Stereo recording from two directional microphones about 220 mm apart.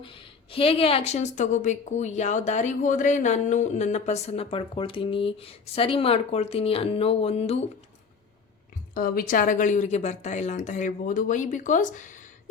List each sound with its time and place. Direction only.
0.0 s a woman's voice: 25° left (ahead or behind)
9.0 s speech: 40° left (ahead or behind)